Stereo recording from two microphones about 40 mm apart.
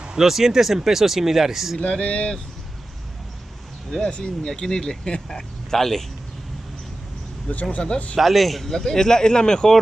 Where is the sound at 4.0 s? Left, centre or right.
Left.